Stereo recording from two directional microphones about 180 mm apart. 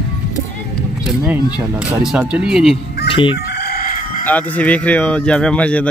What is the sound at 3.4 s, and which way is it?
Chicken, 60° left (ahead or behind).